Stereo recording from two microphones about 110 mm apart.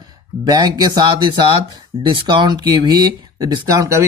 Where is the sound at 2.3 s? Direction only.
40° right (ahead or behind).